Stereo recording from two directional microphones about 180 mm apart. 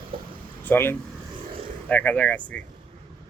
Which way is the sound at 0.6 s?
10° left (ahead or behind).